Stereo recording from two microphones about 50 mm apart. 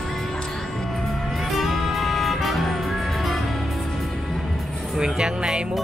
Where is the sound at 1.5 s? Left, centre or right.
Centre.